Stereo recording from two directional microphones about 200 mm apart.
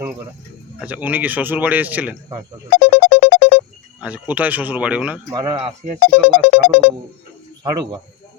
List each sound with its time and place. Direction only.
0.8 s a man's voice: 10° right (ahead or behind)
2.7 s music: 50° left (ahead or behind)
4.0 s a man's voice: 5° right (ahead or behind)
5.3 s speech: 25° right (ahead or behind)
6.2 s music: 50° left (ahead or behind)
7.6 s speech: 20° right (ahead or behind)